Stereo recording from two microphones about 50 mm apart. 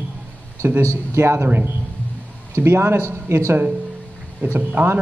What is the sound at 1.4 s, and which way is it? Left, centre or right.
Speech, right.